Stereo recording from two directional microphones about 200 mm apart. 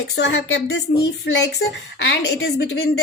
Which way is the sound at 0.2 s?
60° left (ahead or behind).